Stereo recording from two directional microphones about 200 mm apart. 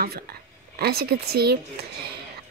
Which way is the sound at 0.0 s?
50° right (ahead or behind).